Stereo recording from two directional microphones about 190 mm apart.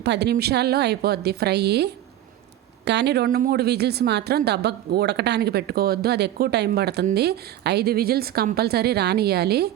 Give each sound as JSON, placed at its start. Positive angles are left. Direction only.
{"t": 0.0, "sound": "speech", "side_deg": -60}